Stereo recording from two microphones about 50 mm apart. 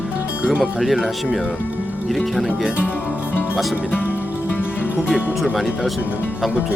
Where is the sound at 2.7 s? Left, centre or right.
Left.